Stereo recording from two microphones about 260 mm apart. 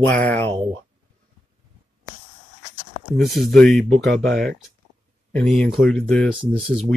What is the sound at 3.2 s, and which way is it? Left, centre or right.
Speech, centre.